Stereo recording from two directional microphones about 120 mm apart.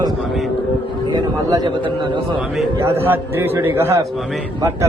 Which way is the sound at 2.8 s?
20° right (ahead or behind).